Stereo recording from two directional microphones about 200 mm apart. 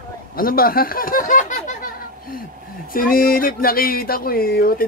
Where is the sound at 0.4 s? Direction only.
45° left (ahead or behind).